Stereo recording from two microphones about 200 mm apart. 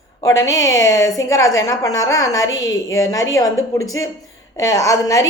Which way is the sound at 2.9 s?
15° left (ahead or behind).